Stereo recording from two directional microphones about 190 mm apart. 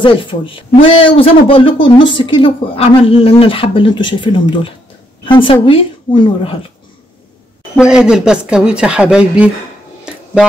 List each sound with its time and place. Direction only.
0.0 s speech: 25° left (ahead or behind)
7.7 s speech: 5° right (ahead or behind)